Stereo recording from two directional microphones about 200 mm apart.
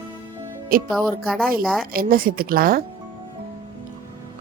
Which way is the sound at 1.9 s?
45° right (ahead or behind).